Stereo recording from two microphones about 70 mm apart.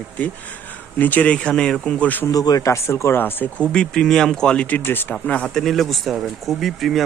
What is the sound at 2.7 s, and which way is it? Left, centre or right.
Speech, left.